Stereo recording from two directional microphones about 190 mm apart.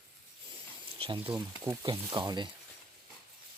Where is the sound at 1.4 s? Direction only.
20° right (ahead or behind).